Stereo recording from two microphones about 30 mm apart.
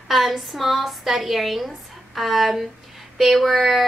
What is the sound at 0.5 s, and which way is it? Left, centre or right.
A woman's voice, centre.